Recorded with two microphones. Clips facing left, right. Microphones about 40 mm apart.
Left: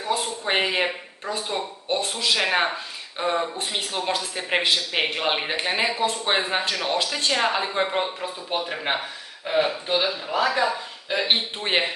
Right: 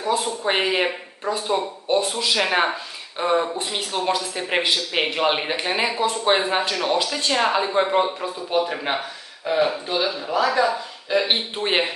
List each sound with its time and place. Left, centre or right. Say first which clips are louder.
0.5 s speech: right 2 dB; centre
8.5 s speech: right 4 dB; centre
11.5 s speech: right 2 dB; centre